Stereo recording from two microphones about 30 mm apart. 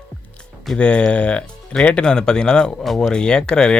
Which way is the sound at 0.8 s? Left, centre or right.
Left.